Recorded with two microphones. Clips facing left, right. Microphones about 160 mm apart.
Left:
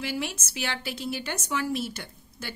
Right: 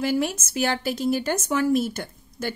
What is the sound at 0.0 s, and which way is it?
A woman's voice, 45° right (ahead or behind).